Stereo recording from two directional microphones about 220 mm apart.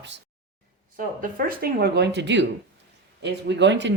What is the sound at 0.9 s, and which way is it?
Speech, 40° right (ahead or behind).